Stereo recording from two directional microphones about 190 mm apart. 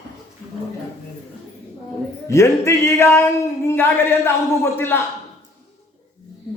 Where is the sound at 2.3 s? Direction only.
15° left (ahead or behind).